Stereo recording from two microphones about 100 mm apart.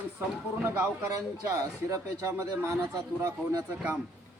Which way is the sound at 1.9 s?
35° right (ahead or behind).